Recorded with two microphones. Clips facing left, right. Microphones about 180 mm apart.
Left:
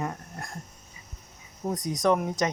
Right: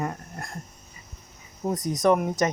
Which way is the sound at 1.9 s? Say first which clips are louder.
Right 3 dB; 5° right (ahead or behind).